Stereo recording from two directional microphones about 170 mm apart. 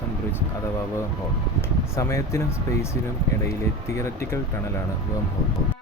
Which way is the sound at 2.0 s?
15° left (ahead or behind).